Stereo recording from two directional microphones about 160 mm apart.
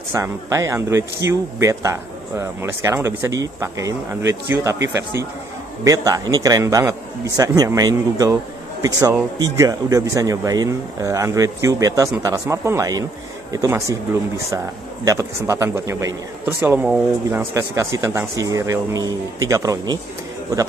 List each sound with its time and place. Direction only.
0.1 s a man's voice: 20° right (ahead or behind)
5.9 s a man's voice: 20° right (ahead or behind)
15.0 s a man's voice: 20° right (ahead or behind)